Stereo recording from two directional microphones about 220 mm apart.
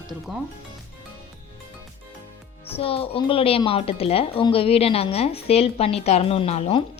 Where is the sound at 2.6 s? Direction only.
25° left (ahead or behind).